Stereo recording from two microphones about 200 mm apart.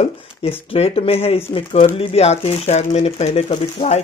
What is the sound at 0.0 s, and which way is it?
Speech, 30° left (ahead or behind).